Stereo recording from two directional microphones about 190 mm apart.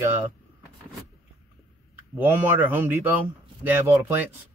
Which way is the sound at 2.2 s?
10° right (ahead or behind).